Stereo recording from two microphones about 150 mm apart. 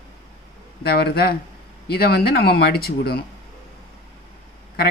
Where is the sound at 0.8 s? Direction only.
90° left.